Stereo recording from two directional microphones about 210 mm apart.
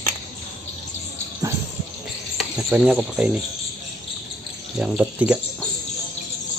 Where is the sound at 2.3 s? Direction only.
5° right (ahead or behind).